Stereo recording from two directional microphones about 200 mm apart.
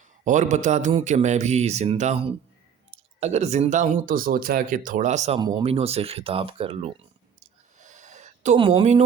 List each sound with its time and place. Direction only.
0.3 s speech: 40° right (ahead or behind)
5.4 s speech: 20° right (ahead or behind)
5.6 s speech: 30° right (ahead or behind)
7.8 s a sound: 35° right (ahead or behind)